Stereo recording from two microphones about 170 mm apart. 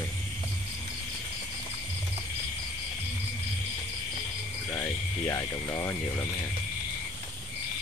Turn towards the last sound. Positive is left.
turn(degrees=20)  # may be behind; listen again after turning